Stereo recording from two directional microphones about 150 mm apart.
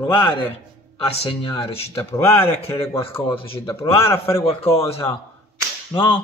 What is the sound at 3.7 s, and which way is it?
Speech, 20° left (ahead or behind).